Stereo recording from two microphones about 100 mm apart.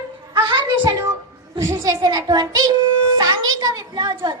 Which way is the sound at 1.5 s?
35° right (ahead or behind).